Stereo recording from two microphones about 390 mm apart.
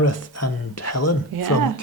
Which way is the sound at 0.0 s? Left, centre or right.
Left.